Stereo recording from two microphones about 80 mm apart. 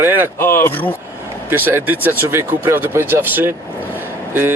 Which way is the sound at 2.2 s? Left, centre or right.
Right.